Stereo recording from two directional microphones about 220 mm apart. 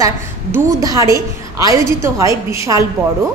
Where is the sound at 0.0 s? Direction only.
15° right (ahead or behind).